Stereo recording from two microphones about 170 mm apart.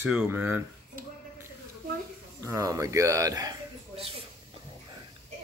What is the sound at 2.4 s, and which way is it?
Speech, 20° right (ahead or behind).